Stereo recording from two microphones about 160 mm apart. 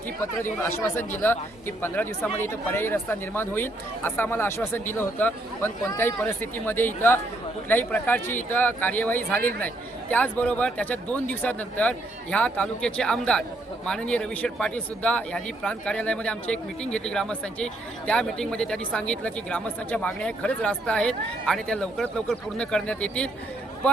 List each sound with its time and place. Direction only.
0.4 s speech: 15° left (ahead or behind)